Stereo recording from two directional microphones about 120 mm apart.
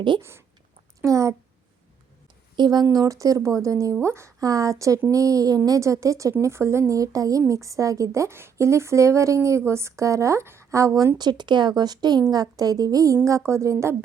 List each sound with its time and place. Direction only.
0.2 s speech: 20° right (ahead or behind)
2.6 s speech: 35° right (ahead or behind)